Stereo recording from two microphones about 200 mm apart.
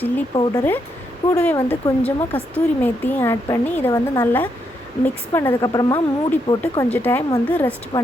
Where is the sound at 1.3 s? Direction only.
10° left (ahead or behind).